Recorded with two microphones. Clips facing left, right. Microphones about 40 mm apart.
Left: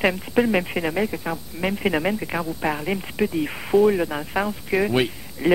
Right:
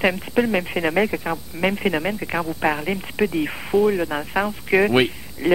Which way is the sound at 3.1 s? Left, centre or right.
Centre.